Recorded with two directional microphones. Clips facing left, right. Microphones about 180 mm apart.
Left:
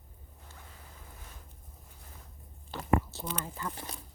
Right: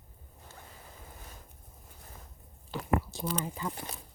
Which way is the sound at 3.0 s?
10° right (ahead or behind).